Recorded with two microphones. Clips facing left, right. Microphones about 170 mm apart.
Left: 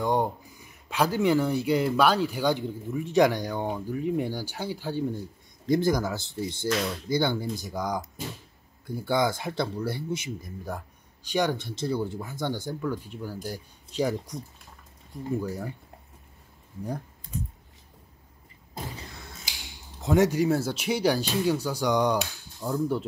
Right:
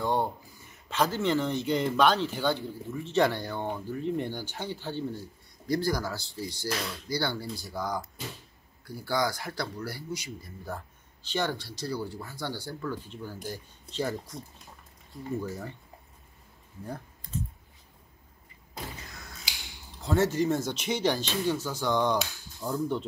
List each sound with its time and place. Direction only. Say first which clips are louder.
0.0 s a sound: left 3 dB; 15° left (ahead or behind)
0.8 s speech: left 3 dB; 10° left (ahead or behind)
16.8 s computer keyboard: left 5 dB; 15° left (ahead or behind)
20.0 s speech: left 4 dB; 15° left (ahead or behind)